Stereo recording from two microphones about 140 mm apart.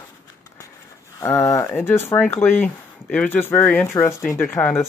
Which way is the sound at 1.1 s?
20° left (ahead or behind).